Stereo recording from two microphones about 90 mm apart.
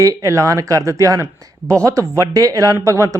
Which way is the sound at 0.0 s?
35° right (ahead or behind).